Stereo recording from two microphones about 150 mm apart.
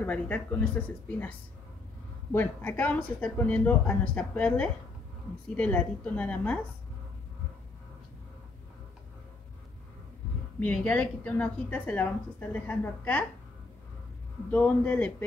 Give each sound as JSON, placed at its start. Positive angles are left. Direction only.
{"t": 0.0, "sound": "a woman's voice", "side_deg": 10}
{"t": 2.3, "sound": "a woman's voice", "side_deg": 10}
{"t": 10.6, "sound": "a woman's voice", "side_deg": 10}
{"t": 14.5, "sound": "a woman's voice", "side_deg": 10}